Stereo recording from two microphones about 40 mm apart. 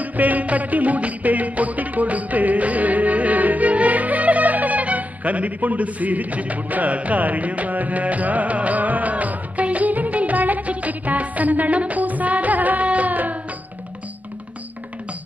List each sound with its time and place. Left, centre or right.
0.0 s music: right